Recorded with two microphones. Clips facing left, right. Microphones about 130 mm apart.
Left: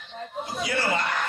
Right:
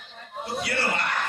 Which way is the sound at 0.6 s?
65° right (ahead or behind).